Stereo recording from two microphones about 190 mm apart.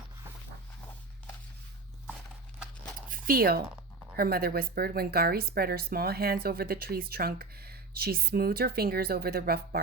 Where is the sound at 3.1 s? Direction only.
50° right (ahead or behind).